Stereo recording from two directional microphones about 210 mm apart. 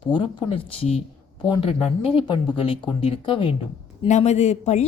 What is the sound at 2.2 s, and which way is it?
Speech, 25° left (ahead or behind).